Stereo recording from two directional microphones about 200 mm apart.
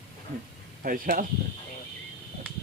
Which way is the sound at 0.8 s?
45° right (ahead or behind).